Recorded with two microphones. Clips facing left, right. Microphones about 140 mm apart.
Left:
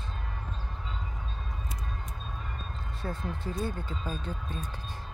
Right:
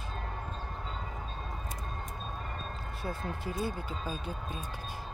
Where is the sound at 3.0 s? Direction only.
10° right (ahead or behind).